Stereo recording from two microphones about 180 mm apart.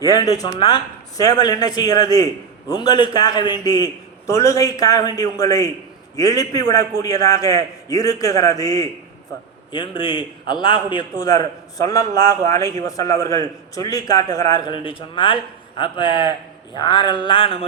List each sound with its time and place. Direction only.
0.0 s a man's voice: 20° left (ahead or behind)